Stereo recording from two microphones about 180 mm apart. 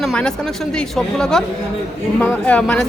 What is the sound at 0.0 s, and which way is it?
A man's voice, 5° left (ahead or behind).